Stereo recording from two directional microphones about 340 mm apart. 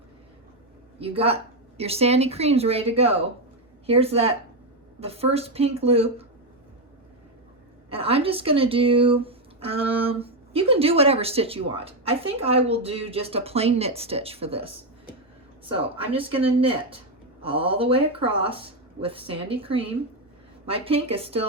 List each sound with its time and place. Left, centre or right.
0.9 s speech: centre
7.9 s speech: centre
15.7 s speech: centre